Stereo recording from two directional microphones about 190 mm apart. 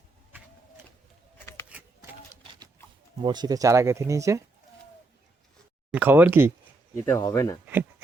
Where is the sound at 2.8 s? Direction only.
15° left (ahead or behind).